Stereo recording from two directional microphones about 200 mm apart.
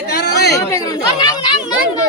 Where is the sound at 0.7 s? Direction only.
15° left (ahead or behind).